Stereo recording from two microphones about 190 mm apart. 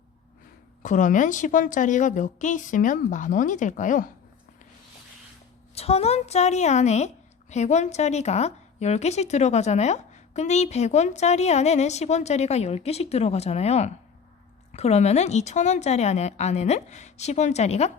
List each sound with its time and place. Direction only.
0.8 s a woman's voice: 40° left (ahead or behind)
5.7 s a woman's voice: 30° left (ahead or behind)